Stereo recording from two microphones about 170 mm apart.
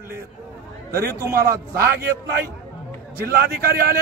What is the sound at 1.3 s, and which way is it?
Speech, 60° right (ahead or behind).